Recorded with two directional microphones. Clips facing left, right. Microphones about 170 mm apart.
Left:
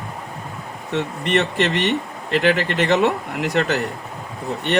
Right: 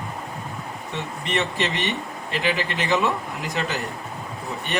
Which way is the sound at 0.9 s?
65° left (ahead or behind).